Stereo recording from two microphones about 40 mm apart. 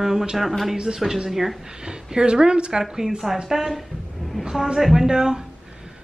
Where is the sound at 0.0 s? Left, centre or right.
Centre.